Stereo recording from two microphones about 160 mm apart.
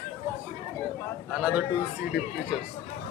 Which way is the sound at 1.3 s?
5° right (ahead or behind).